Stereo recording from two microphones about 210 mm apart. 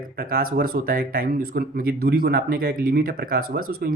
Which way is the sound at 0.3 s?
45° right (ahead or behind).